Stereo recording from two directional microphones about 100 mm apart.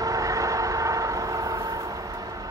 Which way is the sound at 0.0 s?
35° right (ahead or behind).